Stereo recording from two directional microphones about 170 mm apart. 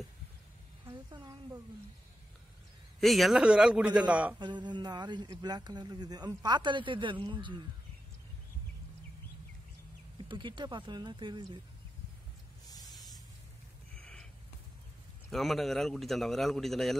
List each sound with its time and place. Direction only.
0.8 s a sound: 25° right (ahead or behind)
3.0 s a man's voice: centre (ahead or behind)
4.4 s speech: 25° right (ahead or behind)
10.1 s speech: 30° right (ahead or behind)
13.9 s snort: 5° left (ahead or behind)
15.3 s a man's voice: centre (ahead or behind)